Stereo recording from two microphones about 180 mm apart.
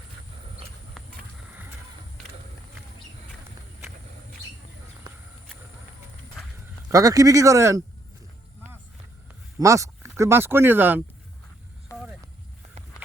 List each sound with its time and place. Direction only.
5.1 s a sound: 25° right (ahead or behind)
6.9 s speech: 20° right (ahead or behind)
9.6 s speech: 15° right (ahead or behind)